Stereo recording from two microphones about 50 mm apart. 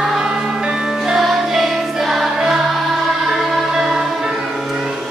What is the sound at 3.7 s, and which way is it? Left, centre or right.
Music, centre.